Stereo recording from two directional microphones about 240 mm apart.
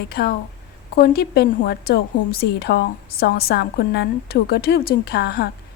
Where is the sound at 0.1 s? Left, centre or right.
Left.